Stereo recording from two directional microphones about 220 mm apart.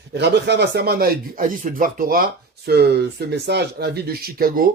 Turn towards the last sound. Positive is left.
turn(degrees=-40)  # may be behind; listen again after turning